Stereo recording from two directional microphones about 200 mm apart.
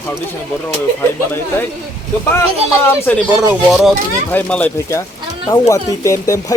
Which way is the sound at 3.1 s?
5° left (ahead or behind).